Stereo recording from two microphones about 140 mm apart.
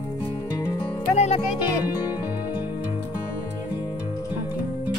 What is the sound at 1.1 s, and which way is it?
Speech, 50° left (ahead or behind).